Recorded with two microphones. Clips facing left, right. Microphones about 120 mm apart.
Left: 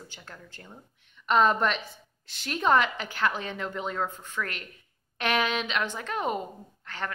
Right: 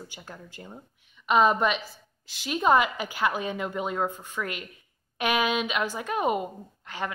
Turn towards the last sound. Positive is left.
turn(degrees=-15)  # may be behind; listen again after turning